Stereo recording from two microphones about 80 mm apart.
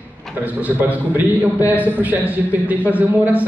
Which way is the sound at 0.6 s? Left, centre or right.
Right.